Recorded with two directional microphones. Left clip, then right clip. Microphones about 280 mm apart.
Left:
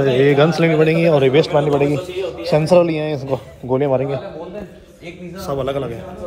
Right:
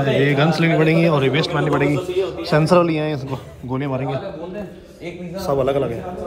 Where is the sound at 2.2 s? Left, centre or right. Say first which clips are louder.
Left 2 dB; centre.